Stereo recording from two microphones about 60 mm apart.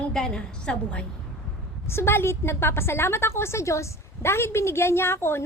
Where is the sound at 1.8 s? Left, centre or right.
Left.